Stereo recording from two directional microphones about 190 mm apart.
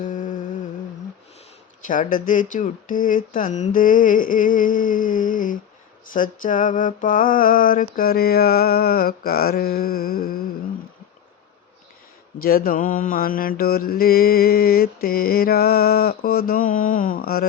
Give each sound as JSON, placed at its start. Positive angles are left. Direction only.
{"t": 0.0, "sound": "music", "side_deg": 45}
{"t": 1.9, "sound": "mantra", "side_deg": 45}
{"t": 12.4, "sound": "mantra", "side_deg": 50}